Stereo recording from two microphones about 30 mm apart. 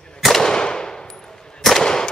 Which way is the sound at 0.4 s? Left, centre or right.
Left.